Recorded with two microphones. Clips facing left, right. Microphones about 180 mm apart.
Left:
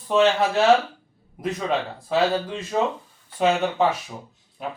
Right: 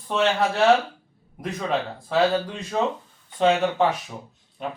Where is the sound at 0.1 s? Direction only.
Centre (ahead or behind).